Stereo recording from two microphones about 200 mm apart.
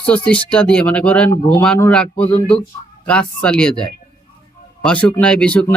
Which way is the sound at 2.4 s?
30° left (ahead or behind).